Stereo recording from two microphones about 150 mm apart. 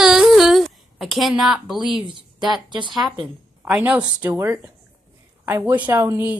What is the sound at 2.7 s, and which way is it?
Speech, 30° right (ahead or behind).